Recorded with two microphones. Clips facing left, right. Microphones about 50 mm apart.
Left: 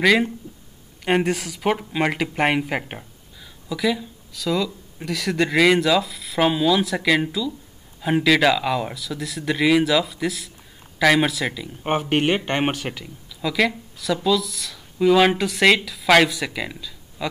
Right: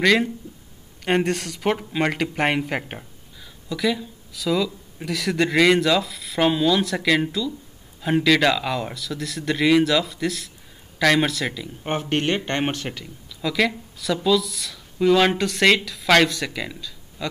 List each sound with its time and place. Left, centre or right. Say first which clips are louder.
0.0 s speech: left 1 dB; centre